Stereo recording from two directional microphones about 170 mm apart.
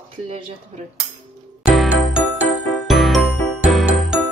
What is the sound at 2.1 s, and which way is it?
Music, 5° right (ahead or behind).